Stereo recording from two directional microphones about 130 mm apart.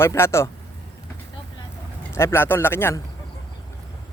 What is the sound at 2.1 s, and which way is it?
Speech, 20° left (ahead or behind).